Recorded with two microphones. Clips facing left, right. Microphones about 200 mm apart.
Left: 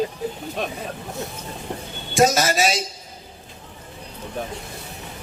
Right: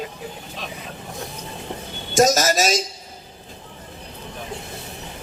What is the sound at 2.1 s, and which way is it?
Speech, 40° right (ahead or behind).